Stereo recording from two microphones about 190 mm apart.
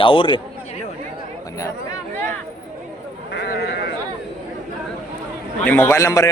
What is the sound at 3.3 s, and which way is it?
Sheep, 60° left (ahead or behind).